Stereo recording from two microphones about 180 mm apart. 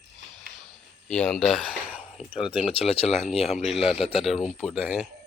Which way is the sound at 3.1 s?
Centre (ahead or behind).